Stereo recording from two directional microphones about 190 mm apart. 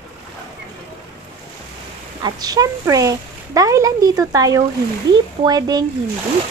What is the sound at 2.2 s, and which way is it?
Speech, 20° right (ahead or behind).